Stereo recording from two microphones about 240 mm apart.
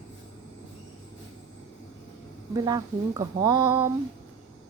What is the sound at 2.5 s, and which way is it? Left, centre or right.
Speech, centre.